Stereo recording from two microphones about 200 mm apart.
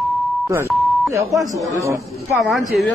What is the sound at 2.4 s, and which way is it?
Speech, centre (ahead or behind).